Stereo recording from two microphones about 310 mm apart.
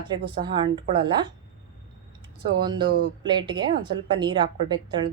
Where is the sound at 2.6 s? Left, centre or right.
Centre.